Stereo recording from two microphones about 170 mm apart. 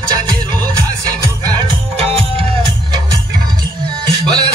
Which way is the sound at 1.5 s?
30° right (ahead or behind).